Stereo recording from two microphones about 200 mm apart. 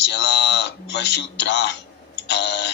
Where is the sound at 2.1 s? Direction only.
60° left (ahead or behind).